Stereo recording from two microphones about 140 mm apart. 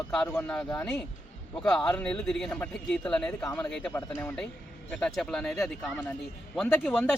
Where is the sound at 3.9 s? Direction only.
25° left (ahead or behind).